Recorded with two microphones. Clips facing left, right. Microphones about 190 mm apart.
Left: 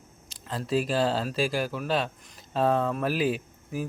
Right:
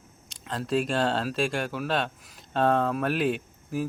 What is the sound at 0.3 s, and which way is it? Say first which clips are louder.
Speech: right 1 dB; centre (ahead or behind).